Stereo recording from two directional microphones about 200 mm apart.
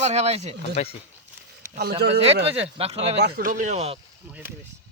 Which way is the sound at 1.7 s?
50° right (ahead or behind).